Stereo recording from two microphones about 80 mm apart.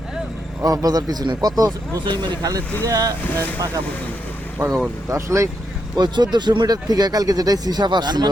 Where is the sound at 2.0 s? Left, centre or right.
Right.